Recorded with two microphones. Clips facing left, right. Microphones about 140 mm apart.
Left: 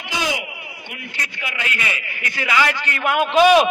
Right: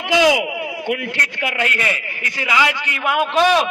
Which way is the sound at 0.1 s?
90° right.